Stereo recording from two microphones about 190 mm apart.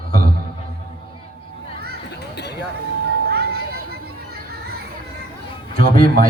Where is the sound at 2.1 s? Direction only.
60° left (ahead or behind).